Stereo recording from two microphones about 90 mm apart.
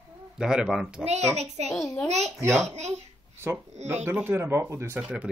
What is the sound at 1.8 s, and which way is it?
Speech, 35° left (ahead or behind).